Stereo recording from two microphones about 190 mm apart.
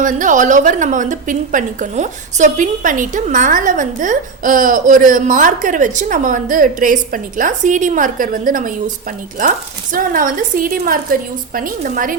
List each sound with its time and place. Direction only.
0.0 s a woman's voice: 45° right (ahead or behind)